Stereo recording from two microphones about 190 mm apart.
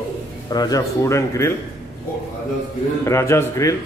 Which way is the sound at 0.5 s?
20° left (ahead or behind).